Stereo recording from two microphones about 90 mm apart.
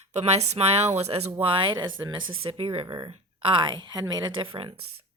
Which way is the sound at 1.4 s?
70° right (ahead or behind).